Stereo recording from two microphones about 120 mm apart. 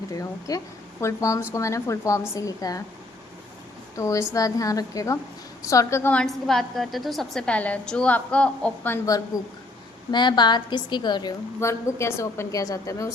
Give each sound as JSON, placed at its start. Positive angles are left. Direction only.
{"t": 0.1, "sound": "a woman's voice", "side_deg": 30}
{"t": 3.9, "sound": "a woman's voice", "side_deg": 25}
{"t": 6.2, "sound": "a woman's voice", "side_deg": 0}
{"t": 9.0, "sound": "a woman's voice", "side_deg": 30}
{"t": 11.6, "sound": "a woman's voice", "side_deg": 25}